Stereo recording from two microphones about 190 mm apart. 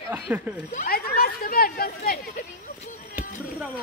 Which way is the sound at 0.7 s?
45° left (ahead or behind).